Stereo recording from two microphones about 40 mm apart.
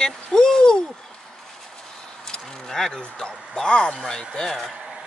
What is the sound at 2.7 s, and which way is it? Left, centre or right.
Speech, centre.